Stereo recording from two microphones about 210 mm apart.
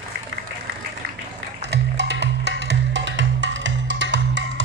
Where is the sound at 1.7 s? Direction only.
55° right (ahead or behind).